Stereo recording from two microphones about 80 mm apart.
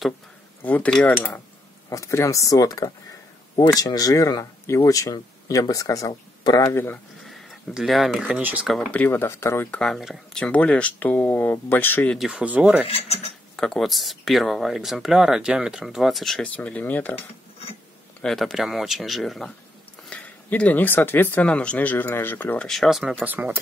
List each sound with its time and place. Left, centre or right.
0.6 s cutlery: left
1.0 s speech: left
1.9 s speech: left
7.2 s a sound: centre
8.2 s rub: right
8.9 s speech: left
9.8 s speech: centre; by 12.1 s left
12.3 s rub: centre
13.6 s speech: centre
16.5 s speech: centre
18.2 s speech: centre
20.1 s speech: centre
22.6 s speech: centre
23.2 s speech: right